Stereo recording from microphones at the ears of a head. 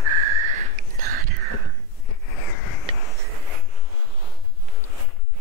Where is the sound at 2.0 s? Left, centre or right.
Left.